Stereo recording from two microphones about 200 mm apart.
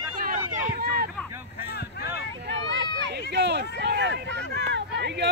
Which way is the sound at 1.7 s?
55° left (ahead or behind).